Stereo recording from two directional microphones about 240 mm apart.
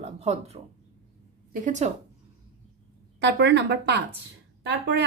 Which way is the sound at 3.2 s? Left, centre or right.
Right.